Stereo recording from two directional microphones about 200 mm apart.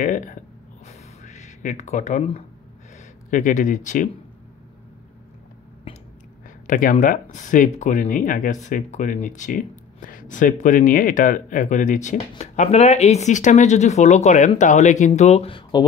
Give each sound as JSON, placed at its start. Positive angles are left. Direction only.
{"t": 0.0, "sound": "speech", "side_deg": 40}
{"t": 0.8, "sound": "a sound", "side_deg": 35}
{"t": 3.3, "sound": "speech", "side_deg": 40}
{"t": 6.7, "sound": "speech", "side_deg": 40}